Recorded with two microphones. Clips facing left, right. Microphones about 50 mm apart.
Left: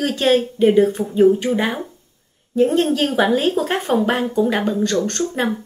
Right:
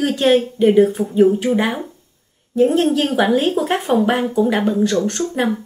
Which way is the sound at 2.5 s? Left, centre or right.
Centre.